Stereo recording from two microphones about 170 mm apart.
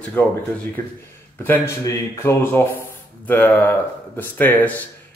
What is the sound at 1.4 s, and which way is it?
Speech, 15° left (ahead or behind).